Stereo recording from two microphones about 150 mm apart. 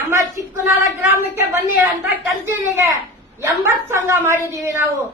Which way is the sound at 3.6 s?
15° right (ahead or behind).